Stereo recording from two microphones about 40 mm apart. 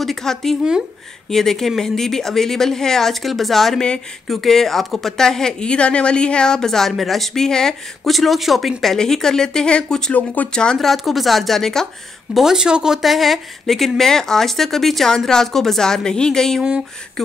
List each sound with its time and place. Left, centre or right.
0.0 s a woman's voice: centre
7.4 s a woman's voice: centre
8.0 s a woman's voice: centre
8.9 s a woman's voice: centre
10.1 s speech: left
10.5 s speech: left
10.8 s a woman's voice: centre
12.5 s speech: centre
13.0 s a woman's voice: centre